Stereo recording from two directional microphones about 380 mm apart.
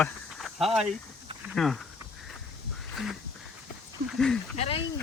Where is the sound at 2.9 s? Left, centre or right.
Centre.